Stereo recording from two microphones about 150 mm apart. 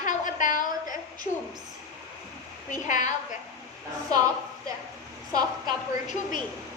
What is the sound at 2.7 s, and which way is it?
Speech, 55° left (ahead or behind).